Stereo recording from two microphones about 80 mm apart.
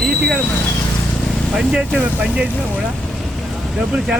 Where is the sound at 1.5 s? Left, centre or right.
Centre.